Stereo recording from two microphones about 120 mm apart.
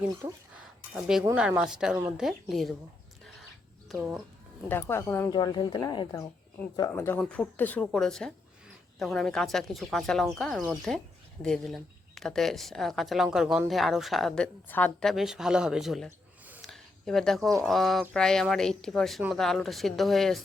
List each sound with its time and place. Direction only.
0.9 s speech: 5° right (ahead or behind)
4.7 s speech: 20° left (ahead or behind)
5.3 s speech: 40° left (ahead or behind)
6.7 s speech: 25° left (ahead or behind)
7.9 s a woman's voice: 5° left (ahead or behind)
15.0 s speech: centre (ahead or behind)